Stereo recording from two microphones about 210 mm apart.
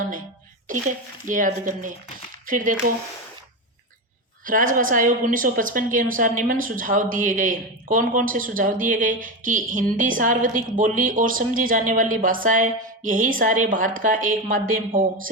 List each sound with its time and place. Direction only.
0.7 s a woman's voice: 40° right (ahead or behind)
4.4 s a woman's voice: 40° right (ahead or behind)